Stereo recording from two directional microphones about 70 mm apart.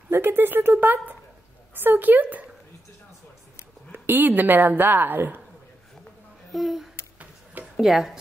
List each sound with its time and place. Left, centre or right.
0.1 s a woman's voice: right
3.9 s a woman's voice: right
6.5 s a sound: centre
7.7 s speech: centre